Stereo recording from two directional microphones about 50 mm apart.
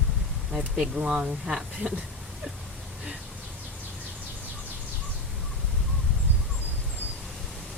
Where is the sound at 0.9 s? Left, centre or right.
Right.